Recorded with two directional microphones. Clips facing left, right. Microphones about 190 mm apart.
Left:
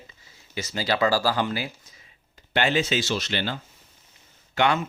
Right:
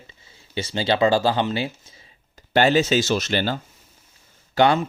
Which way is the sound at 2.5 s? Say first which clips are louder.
Right 6 dB; 40° right (ahead or behind).